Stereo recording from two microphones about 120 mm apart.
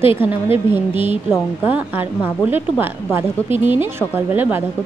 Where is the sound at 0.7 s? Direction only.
15° right (ahead or behind).